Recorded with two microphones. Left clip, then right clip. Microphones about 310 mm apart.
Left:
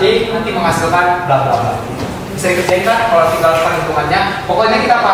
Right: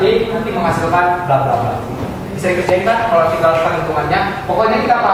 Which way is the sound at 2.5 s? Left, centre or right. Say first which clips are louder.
Left 1 dB; centre.